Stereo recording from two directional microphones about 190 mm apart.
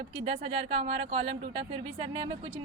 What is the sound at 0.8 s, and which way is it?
Speech, 25° right (ahead or behind).